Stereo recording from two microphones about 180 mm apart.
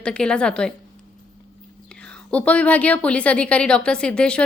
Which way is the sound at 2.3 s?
5° left (ahead or behind).